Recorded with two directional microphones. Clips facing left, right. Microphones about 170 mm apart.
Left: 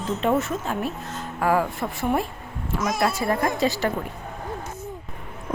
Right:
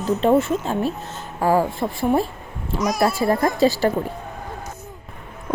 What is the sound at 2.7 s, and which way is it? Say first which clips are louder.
Speech: right 3 dB; 25° left (ahead or behind).